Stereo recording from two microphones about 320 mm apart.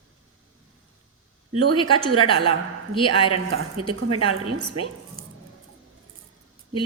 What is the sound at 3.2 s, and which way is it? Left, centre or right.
Speech, right.